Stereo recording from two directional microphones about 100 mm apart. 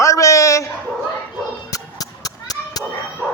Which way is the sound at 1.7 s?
40° left (ahead or behind).